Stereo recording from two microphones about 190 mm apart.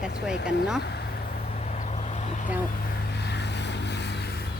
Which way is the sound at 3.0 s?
60° left (ahead or behind).